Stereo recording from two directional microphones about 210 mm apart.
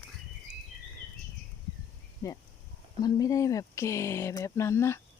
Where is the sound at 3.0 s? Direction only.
15° left (ahead or behind).